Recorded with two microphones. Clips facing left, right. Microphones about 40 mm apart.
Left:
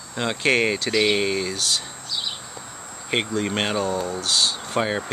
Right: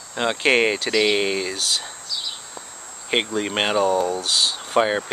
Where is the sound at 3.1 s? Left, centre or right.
Centre.